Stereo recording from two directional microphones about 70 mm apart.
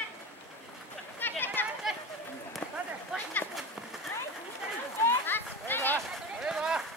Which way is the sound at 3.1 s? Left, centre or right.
Centre.